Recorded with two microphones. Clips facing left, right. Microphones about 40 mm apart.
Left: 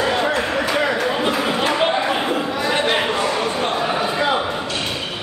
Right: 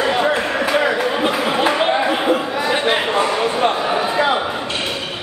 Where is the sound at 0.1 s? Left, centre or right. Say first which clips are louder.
Right 2 dB; centre.